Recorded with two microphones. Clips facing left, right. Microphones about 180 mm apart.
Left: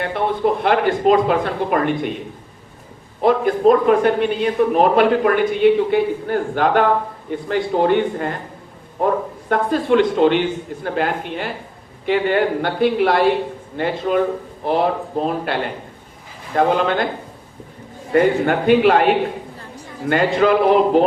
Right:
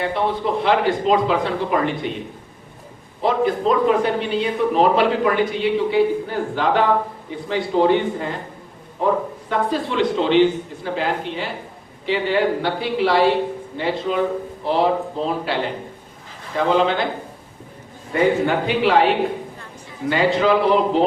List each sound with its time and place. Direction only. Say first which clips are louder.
0.0 s a man's voice: left 2 dB; 55° left (ahead or behind)
3.2 s a man's voice: left 4 dB; 55° left (ahead or behind)
9.5 s a man's voice: left 6 dB; 55° left (ahead or behind)
18.1 s a man's voice: left 2 dB; 55° left (ahead or behind)
20.1 s a man's voice: left 2 dB; 50° left (ahead or behind)